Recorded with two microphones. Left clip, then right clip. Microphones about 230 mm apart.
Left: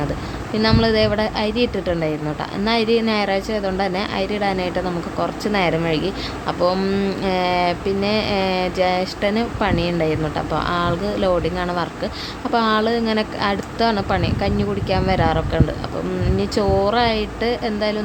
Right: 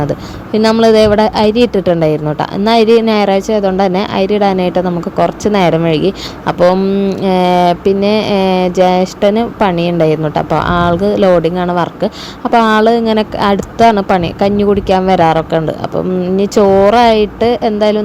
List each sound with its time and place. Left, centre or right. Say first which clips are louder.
0.8 s speech: right 12 dB; right
6.7 s speech: right 8 dB; centre
7.2 s speech: right 9 dB; right